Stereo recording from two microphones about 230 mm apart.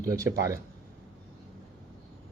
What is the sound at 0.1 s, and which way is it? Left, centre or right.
Speech, centre.